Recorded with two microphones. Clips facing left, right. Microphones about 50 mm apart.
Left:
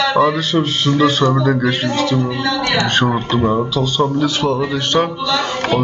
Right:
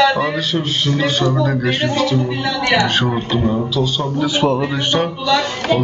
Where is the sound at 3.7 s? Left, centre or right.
Centre.